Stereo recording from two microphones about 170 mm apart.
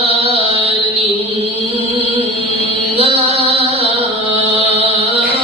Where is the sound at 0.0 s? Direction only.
35° right (ahead or behind).